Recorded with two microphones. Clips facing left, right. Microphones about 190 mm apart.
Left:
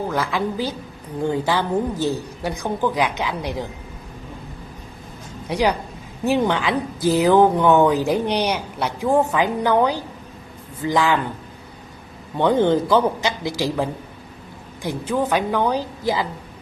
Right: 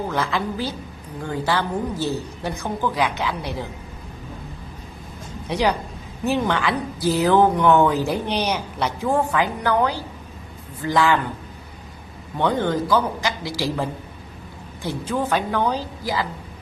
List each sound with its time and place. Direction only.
0.1 s a woman's voice: 10° left (ahead or behind)
5.5 s a woman's voice: 10° left (ahead or behind)
12.4 s a man's voice: 15° left (ahead or behind)